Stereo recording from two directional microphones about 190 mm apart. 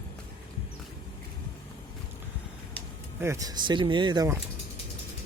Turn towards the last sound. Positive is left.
turn(degrees=-20)  # may be behind; listen again after turning